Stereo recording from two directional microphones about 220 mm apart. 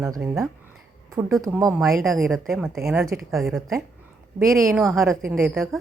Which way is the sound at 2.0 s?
Centre (ahead or behind).